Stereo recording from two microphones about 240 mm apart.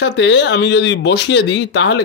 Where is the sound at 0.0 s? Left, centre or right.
Left.